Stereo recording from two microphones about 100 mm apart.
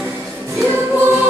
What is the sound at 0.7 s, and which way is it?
Music, 25° right (ahead or behind).